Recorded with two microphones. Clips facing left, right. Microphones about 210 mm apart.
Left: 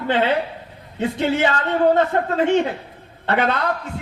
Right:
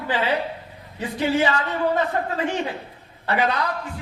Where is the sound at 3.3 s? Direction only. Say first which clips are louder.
Left 3 dB; 55° left (ahead or behind).